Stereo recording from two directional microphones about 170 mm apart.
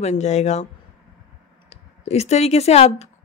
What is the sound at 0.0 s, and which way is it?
Speech, 40° left (ahead or behind).